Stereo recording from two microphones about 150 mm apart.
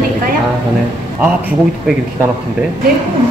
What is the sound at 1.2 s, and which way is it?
Speech, 10° right (ahead or behind).